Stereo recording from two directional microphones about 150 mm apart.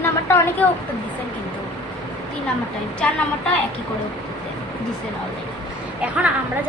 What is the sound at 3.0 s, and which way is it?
Speech, 5° left (ahead or behind).